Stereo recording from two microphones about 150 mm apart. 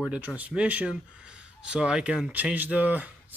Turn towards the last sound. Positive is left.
turn(degrees=-10)  # may be behind; listen again after turning